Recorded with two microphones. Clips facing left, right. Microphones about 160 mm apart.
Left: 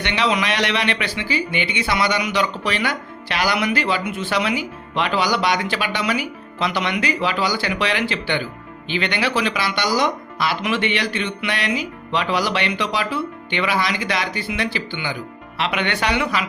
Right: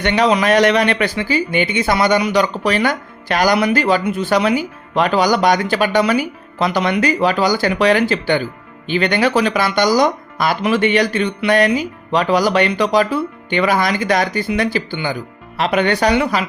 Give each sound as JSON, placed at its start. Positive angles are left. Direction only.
{"t": 0.0, "sound": "speech", "side_deg": -45}